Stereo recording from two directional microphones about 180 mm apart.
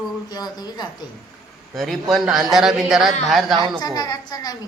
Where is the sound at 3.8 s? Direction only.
20° left (ahead or behind).